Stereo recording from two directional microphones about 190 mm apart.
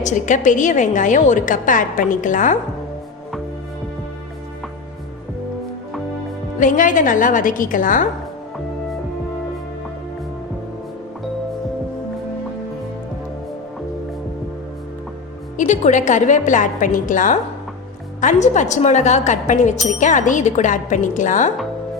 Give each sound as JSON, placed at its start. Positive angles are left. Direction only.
{"t": 0.0, "sound": "a woman's voice", "side_deg": 40}
{"t": 6.6, "sound": "a woman's voice", "side_deg": 45}
{"t": 15.5, "sound": "a woman's voice", "side_deg": 40}